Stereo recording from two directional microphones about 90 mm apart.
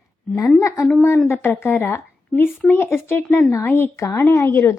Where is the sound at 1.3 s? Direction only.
25° left (ahead or behind).